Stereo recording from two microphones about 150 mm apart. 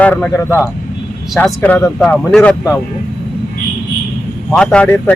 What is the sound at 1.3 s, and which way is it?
Speech, 5° left (ahead or behind).